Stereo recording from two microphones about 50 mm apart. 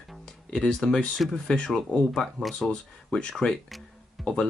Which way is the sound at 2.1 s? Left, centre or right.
Centre.